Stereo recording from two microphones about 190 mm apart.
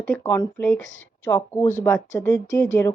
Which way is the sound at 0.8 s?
80° left.